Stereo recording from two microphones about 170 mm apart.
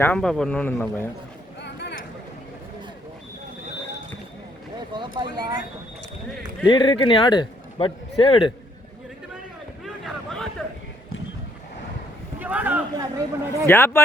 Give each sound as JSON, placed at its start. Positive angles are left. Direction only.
{"t": 0.0, "sound": "a man's voice", "side_deg": 5}
{"t": 1.6, "sound": "a sound", "side_deg": 90}
{"t": 4.9, "sound": "speech", "side_deg": -25}
{"t": 6.7, "sound": "a man's voice", "side_deg": 30}
{"t": 9.8, "sound": "a sound", "side_deg": 0}
{"t": 12.4, "sound": "speech", "side_deg": -10}
{"t": 13.7, "sound": "a man's voice", "side_deg": 15}